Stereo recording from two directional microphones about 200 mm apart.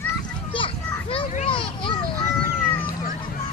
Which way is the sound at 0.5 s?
25° left (ahead or behind).